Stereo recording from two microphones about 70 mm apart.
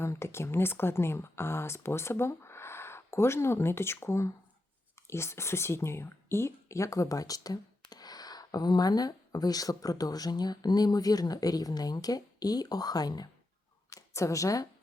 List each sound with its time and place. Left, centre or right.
0.0 s speech: left
13.9 s speech: left